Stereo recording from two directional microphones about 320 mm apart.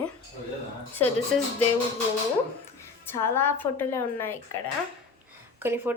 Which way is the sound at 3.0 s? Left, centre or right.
Centre.